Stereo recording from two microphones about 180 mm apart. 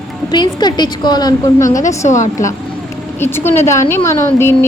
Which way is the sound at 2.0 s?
45° left (ahead or behind).